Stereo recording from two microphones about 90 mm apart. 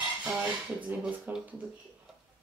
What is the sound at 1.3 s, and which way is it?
Speech, 20° right (ahead or behind).